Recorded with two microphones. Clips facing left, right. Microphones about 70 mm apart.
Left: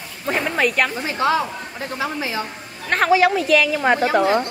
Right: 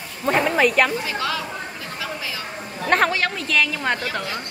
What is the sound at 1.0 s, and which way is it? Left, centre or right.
Speech, left.